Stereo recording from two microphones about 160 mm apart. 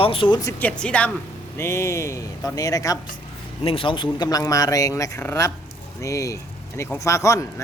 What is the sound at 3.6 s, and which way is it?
Speech, 35° left (ahead or behind).